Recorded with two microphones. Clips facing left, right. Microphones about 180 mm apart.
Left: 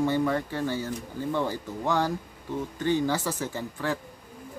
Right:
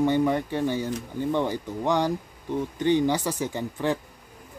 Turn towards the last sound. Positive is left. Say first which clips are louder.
# right 4 dB
turn(degrees=-20)  # may be behind; listen again after turning